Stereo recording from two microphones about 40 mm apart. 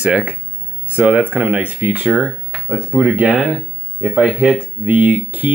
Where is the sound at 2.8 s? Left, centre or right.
Right.